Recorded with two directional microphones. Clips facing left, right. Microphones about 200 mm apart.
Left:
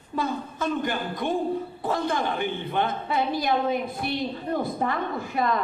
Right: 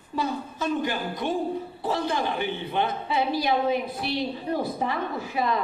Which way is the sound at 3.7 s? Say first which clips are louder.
Right 1 dB; 50° left (ahead or behind).